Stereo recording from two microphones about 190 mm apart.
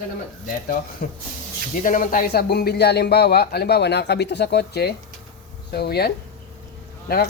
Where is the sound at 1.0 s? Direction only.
50° left (ahead or behind).